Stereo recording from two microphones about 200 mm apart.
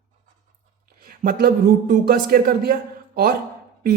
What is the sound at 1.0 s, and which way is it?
A man's voice, 45° right (ahead or behind).